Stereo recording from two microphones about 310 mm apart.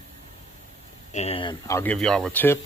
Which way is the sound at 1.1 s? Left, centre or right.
Centre.